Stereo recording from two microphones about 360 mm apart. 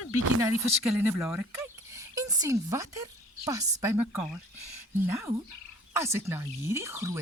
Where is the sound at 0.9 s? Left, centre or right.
Centre.